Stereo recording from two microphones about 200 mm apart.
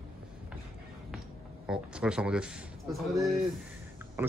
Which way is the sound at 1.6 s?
5° right (ahead or behind).